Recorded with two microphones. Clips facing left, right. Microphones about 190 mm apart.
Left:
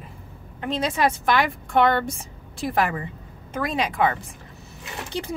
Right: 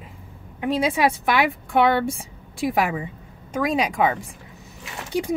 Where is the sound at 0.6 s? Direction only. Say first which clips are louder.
Right 3 dB; 10° right (ahead or behind).